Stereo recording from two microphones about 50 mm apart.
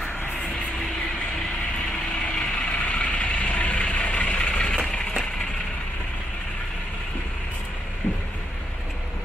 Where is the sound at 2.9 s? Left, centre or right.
Left.